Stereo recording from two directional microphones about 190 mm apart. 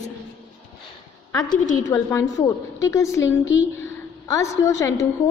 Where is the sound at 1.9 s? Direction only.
15° left (ahead or behind).